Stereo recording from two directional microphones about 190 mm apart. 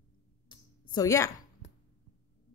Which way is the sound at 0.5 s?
20° left (ahead or behind).